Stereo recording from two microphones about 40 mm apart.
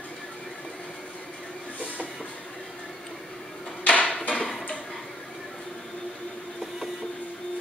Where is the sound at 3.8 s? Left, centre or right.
Left.